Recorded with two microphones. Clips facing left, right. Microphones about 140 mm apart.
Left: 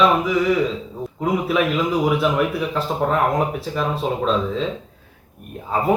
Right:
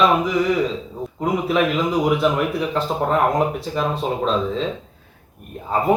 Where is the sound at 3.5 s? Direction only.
Centre (ahead or behind).